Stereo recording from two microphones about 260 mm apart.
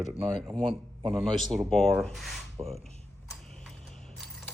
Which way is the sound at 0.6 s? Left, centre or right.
Centre.